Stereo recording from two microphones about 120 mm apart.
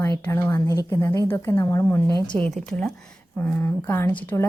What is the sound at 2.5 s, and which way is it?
A woman's voice, 5° left (ahead or behind).